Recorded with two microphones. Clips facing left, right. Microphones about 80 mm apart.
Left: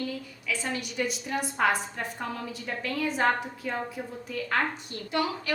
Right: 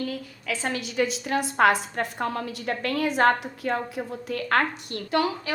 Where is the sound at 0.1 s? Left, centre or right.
Right.